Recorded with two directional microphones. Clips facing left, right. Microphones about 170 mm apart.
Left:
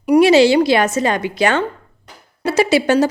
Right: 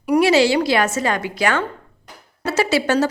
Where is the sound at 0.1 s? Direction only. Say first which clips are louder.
Left 5 dB; 20° left (ahead or behind).